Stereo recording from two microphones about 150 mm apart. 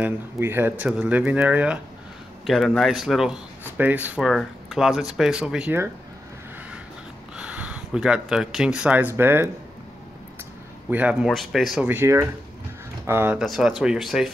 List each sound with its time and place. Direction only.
0.0 s speech: 15° right (ahead or behind)
7.3 s speech: 10° right (ahead or behind)
10.9 s speech: 10° right (ahead or behind)
11.2 s speech: centre (ahead or behind)
11.9 s speech: 15° right (ahead or behind)
13.4 s speech: 5° right (ahead or behind)